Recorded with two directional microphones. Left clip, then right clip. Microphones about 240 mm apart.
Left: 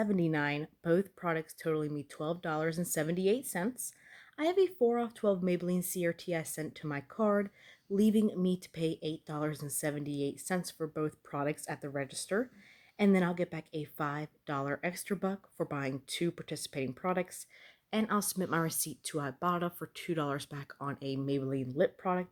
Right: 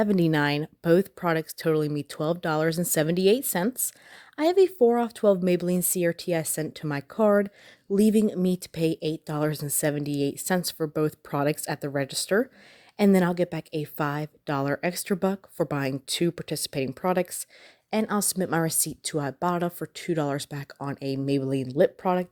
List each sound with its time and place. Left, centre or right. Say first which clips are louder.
0.0 s a woman's voice: right 9 dB; right